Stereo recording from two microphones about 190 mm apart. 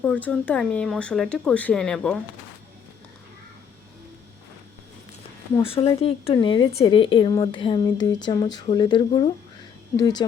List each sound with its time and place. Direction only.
0.0 s speech: 5° left (ahead or behind)
5.5 s speech: 30° left (ahead or behind)